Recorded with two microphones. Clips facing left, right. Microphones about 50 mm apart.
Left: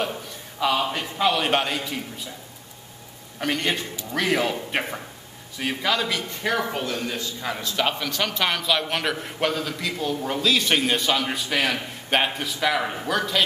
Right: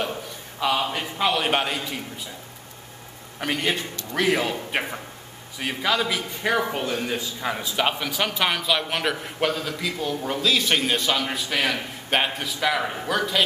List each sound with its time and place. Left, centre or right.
0.6 s a man's voice: centre
3.3 s a man's voice: centre